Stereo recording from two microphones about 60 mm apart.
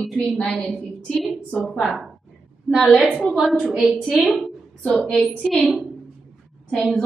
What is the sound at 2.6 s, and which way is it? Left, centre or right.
A woman's voice, centre.